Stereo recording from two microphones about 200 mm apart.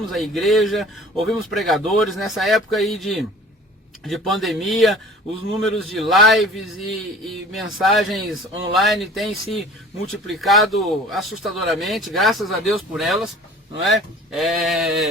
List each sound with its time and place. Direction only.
0.1 s speech: centre (ahead or behind)